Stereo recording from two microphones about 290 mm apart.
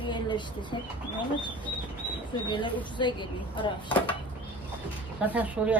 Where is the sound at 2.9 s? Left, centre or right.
Centre.